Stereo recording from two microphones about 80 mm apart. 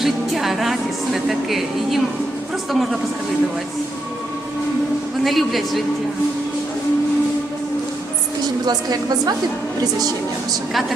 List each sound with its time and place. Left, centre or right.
0.0 s speech: centre
5.2 s speech: centre
8.6 s a woman's voice: right